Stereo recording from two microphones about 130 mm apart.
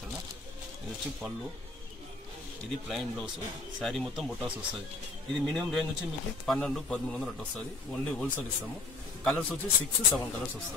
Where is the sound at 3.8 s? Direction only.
Centre (ahead or behind).